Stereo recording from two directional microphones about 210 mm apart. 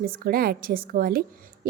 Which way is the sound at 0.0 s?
45° right (ahead or behind).